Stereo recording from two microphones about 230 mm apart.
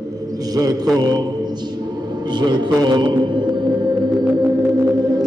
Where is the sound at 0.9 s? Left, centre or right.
Centre.